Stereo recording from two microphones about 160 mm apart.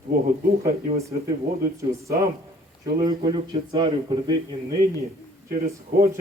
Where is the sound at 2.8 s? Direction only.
25° right (ahead or behind).